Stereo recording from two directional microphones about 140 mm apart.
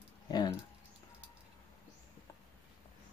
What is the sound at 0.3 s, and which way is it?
Keys jangling, 30° left (ahead or behind).